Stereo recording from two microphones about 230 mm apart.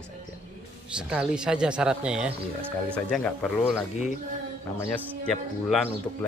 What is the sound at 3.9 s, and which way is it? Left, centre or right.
Speech, left.